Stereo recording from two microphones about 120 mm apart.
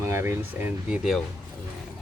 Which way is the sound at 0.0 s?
20° right (ahead or behind).